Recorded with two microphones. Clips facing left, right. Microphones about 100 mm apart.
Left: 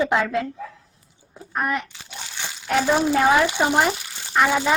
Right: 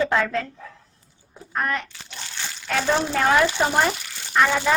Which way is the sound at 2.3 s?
15° left (ahead or behind).